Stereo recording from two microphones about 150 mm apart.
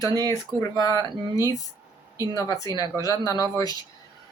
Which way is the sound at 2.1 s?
25° left (ahead or behind).